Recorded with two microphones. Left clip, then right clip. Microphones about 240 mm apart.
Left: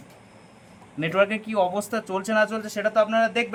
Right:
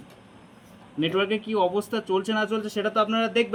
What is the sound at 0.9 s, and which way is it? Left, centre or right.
Speech, left.